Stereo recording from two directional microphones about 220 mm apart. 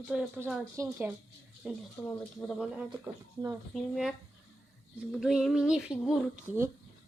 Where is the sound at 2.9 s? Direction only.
15° right (ahead or behind).